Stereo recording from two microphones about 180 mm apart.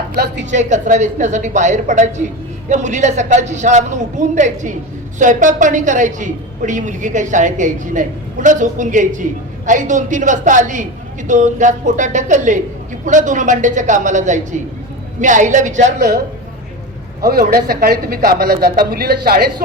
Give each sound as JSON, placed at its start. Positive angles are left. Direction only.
{"t": 0.5, "sound": "a woman's voice", "side_deg": -40}
{"t": 16.0, "sound": "speech", "side_deg": -60}